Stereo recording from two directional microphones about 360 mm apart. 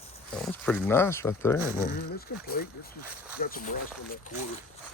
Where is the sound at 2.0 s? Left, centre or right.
Left.